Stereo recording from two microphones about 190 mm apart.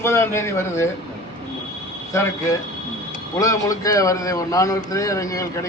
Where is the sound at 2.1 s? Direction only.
15° left (ahead or behind).